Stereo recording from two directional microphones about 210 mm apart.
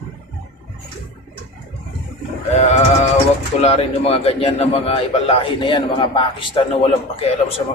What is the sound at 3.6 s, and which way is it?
A man's voice, 30° left (ahead or behind).